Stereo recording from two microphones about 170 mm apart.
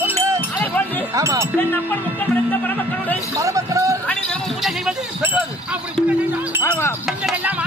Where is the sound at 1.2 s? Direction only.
15° right (ahead or behind).